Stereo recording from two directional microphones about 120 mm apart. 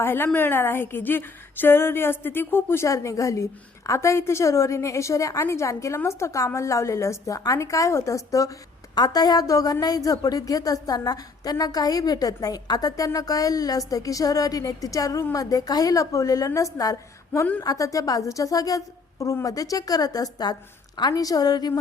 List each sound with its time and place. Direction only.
0.0 s a woman's voice: 20° left (ahead or behind)